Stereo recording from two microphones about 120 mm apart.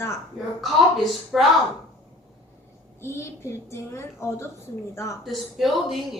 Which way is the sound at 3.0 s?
20° left (ahead or behind).